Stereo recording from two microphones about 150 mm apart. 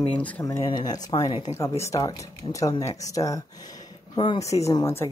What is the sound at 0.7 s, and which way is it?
Speech, 30° left (ahead or behind).